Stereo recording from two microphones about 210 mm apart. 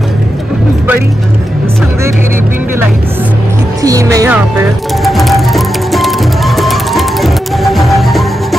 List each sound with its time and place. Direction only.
3.8 s speech: 15° right (ahead or behind)
5.0 s music: centre (ahead or behind)